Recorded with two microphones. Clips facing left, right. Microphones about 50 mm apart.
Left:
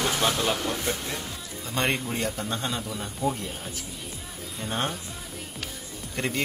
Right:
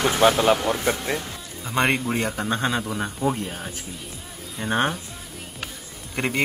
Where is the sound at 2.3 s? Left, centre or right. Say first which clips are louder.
Right 6 dB; right.